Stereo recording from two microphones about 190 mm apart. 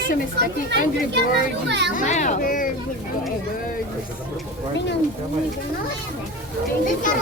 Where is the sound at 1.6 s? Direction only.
65° right (ahead or behind).